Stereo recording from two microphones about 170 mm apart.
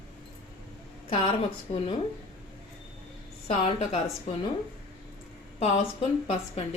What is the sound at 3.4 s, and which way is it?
Speech, 40° left (ahead or behind).